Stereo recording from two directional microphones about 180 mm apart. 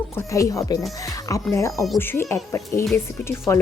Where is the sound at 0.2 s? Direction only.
15° left (ahead or behind).